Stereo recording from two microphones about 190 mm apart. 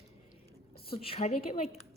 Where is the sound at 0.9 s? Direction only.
30° left (ahead or behind).